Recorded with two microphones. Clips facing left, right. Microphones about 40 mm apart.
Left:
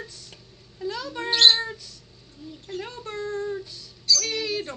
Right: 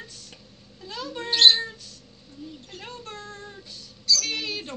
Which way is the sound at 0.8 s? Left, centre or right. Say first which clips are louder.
Left 5 dB; right.